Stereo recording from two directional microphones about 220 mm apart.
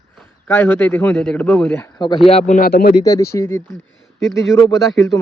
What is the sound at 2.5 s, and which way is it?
Speech, 40° left (ahead or behind).